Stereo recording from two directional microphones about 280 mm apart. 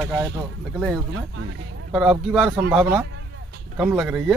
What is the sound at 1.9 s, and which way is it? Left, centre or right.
Speech, centre.